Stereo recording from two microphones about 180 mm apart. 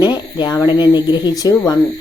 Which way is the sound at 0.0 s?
20° left (ahead or behind).